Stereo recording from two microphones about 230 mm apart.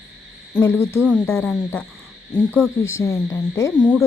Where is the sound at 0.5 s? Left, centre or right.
Centre.